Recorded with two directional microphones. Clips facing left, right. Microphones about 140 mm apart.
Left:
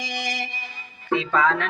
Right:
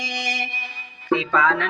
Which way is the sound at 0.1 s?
45° left (ahead or behind).